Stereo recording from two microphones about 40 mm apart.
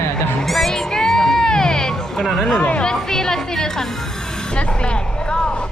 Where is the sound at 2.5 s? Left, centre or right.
Left.